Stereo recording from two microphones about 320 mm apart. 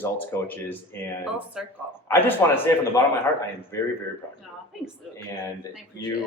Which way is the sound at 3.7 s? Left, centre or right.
Centre.